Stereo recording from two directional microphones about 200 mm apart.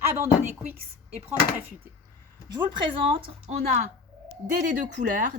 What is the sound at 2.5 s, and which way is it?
Speech, 25° right (ahead or behind).